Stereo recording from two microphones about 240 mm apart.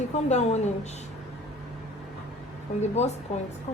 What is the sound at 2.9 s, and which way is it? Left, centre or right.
Speech, left.